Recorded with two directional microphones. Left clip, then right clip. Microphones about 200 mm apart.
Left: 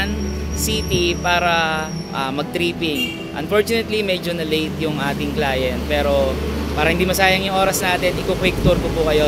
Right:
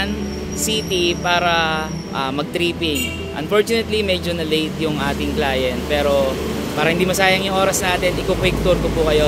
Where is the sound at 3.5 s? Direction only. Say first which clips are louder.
Right 1 dB; 5° left (ahead or behind).